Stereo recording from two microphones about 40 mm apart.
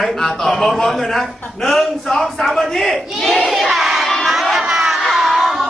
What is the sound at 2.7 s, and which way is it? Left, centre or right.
Battle cry, centre.